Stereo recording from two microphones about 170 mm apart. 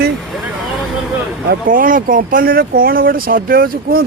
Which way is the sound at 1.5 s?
55° right (ahead or behind).